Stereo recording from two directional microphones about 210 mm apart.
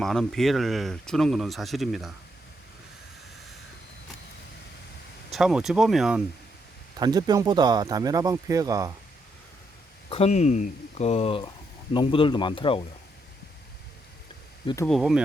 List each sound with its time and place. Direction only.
0.0 s speech: centre (ahead or behind)
5.3 s speech: centre (ahead or behind)
7.0 s speech: 20° right (ahead or behind)
10.1 s speech: 30° left (ahead or behind)
14.8 s speech: centre (ahead or behind)